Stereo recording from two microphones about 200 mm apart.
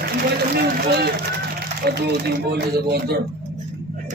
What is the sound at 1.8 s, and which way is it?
A man's voice, 55° right (ahead or behind).